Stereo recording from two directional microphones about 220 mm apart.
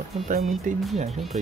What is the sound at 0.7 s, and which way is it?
Speech, 35° right (ahead or behind).